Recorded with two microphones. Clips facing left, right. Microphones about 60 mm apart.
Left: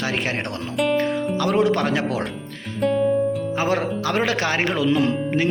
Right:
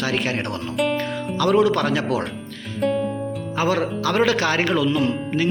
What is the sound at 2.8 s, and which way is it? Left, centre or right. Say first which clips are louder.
Speech: left 1 dB; centre.